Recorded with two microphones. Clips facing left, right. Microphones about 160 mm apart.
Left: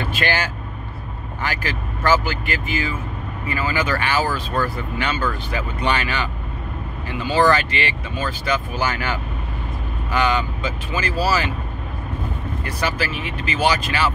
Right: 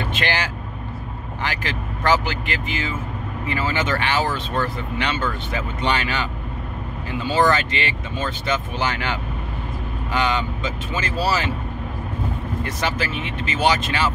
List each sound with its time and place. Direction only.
0.1 s vehicle: 15° right (ahead or behind)
1.4 s speech: 20° right (ahead or behind)
7.4 s speech: 20° right (ahead or behind)
12.6 s speech: 20° right (ahead or behind)